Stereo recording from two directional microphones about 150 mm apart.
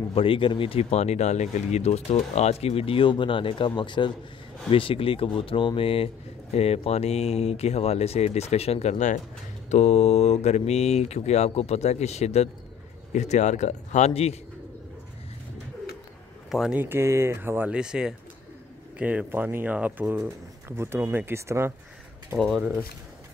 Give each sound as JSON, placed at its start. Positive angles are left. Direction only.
{"t": 0.1, "sound": "speech", "side_deg": 35}
{"t": 16.4, "sound": "speech", "side_deg": -5}
{"t": 16.8, "sound": "speech", "side_deg": -15}
{"t": 22.4, "sound": "speech", "side_deg": 0}